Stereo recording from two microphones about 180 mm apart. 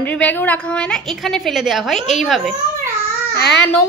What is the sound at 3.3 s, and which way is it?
Speech, 65° left (ahead or behind).